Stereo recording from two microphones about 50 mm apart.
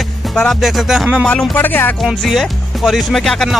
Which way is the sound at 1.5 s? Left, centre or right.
Left.